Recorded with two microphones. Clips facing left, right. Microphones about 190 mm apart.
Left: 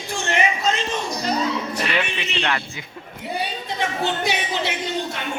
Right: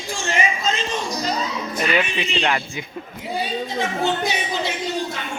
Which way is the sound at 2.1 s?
65° left (ahead or behind).